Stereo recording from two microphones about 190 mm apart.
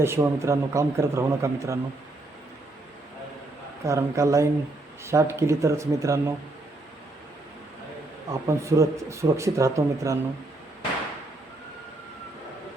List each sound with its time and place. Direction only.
0.0 s speech: 15° right (ahead or behind)
3.8 s speech: 15° right (ahead or behind)
8.3 s speech: 15° right (ahead or behind)